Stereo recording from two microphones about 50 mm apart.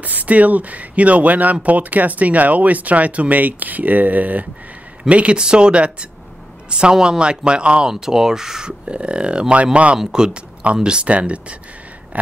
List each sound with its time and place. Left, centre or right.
0.0 s speech: right
9.9 s speech: centre